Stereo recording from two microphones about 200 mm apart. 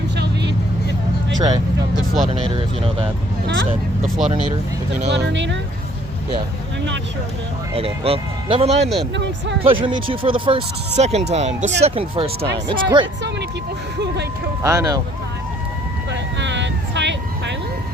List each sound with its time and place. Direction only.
1.4 s speech: 20° right (ahead or behind)
3.4 s speech: 70° right (ahead or behind)
5.0 s speech: 60° right (ahead or behind)
7.8 s speech: 30° right (ahead or behind)
9.1 s speech: 60° right (ahead or behind)
9.8 s speech: 25° right (ahead or behind)
14.6 s speech: 15° right (ahead or behind)
16.4 s vehicle: 65° right (ahead or behind)